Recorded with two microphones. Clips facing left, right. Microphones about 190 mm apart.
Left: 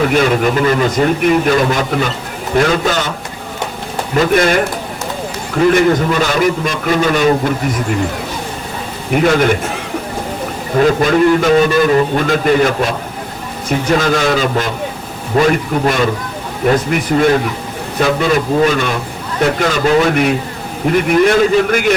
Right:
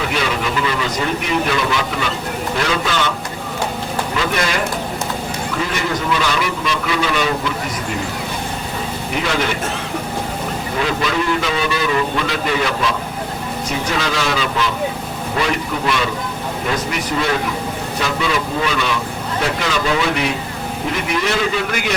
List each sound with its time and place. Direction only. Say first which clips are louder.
0.0 s a man's voice: left 8 dB; 50° left (ahead or behind)
4.1 s a man's voice: left 10 dB; 45° left (ahead or behind)
5.7 s a man's voice: left 8 dB; 50° left (ahead or behind)
9.2 s a man's voice: left 9 dB; 50° left (ahead or behind)
10.8 s a man's voice: left 10 dB; 45° left (ahead or behind)
13.9 s a man's voice: left 8 dB; 50° left (ahead or behind)
17.1 s a man's voice: left 8 dB; 45° left (ahead or behind)